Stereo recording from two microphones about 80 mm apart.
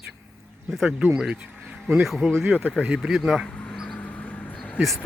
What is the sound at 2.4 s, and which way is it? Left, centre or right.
Speech, right.